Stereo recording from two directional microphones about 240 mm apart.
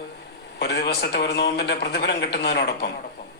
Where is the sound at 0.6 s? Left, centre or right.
Left.